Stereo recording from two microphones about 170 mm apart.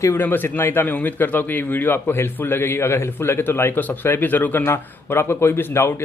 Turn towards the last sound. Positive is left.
turn(degrees=15)  # may be behind; listen again after turning